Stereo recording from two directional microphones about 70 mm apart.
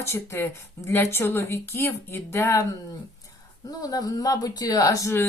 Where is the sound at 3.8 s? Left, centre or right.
Left.